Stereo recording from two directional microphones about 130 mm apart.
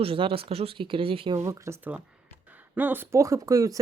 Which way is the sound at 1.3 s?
25° right (ahead or behind).